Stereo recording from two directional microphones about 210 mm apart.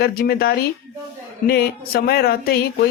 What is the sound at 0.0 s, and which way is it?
A woman's voice, 45° left (ahead or behind).